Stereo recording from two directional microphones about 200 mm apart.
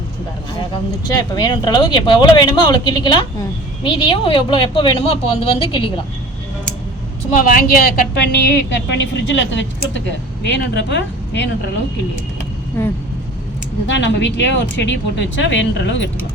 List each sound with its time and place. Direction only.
1.0 s speech: 20° left (ahead or behind)
7.3 s speech: 45° left (ahead or behind)
8.1 s speech: 55° left (ahead or behind)
13.8 s speech: 65° left (ahead or behind)